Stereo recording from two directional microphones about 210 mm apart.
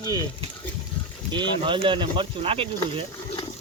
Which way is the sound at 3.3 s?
30° left (ahead or behind).